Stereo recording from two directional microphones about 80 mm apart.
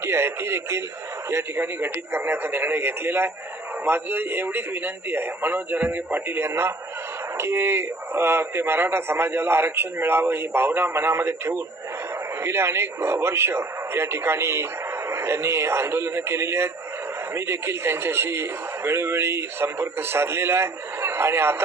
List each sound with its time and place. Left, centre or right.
0.0 s a man's voice: right